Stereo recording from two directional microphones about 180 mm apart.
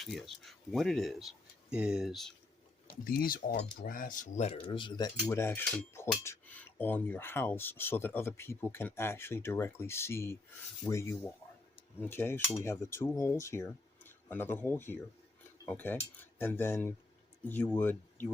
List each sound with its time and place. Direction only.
0.0 s speech: centre (ahead or behind)
3.0 s speech: 50° left (ahead or behind); by 5.1 s 25° left (ahead or behind)
5.3 s speech: 15° left (ahead or behind)